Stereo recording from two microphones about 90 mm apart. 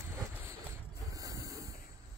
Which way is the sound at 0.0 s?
35° right (ahead or behind).